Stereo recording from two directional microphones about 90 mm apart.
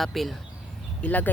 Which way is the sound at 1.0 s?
15° left (ahead or behind).